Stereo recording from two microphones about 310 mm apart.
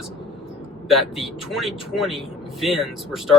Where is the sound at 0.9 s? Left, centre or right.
Centre.